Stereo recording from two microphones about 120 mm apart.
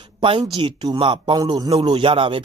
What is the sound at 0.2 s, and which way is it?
Speech, 45° right (ahead or behind).